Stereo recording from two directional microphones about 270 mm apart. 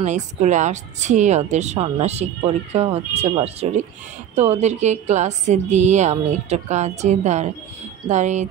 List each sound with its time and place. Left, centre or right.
0.0 s speech: right